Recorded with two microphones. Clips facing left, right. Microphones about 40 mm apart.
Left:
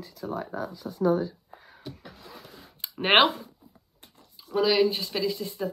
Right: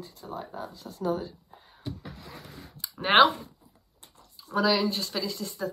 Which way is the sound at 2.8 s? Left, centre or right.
Left.